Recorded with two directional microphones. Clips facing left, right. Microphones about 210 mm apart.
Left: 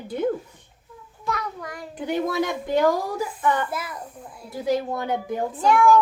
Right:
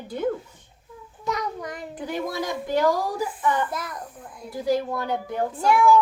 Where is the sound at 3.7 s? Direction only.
5° left (ahead or behind).